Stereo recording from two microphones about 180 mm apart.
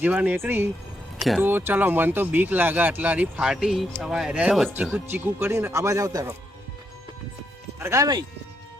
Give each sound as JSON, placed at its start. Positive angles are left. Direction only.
{"t": 0.0, "sound": "speech", "side_deg": -10}
{"t": 5.1, "sound": "speech", "side_deg": -15}
{"t": 7.8, "sound": "speech", "side_deg": -15}